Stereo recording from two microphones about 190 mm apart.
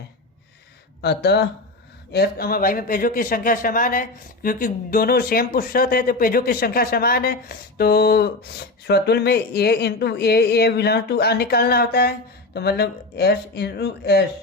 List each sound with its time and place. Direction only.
1.0 s speech: 60° left (ahead or behind)